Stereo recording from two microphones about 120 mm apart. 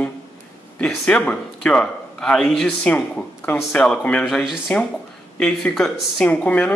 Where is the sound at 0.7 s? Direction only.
10° left (ahead or behind).